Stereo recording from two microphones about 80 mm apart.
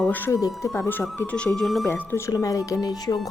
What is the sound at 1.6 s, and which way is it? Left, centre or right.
Speech, centre.